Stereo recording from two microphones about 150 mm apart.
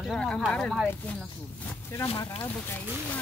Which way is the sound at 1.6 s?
20° left (ahead or behind).